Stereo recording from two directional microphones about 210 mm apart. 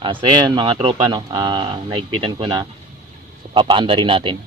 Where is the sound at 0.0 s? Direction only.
20° right (ahead or behind).